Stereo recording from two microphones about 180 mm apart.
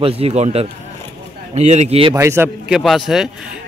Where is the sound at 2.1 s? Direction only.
15° right (ahead or behind).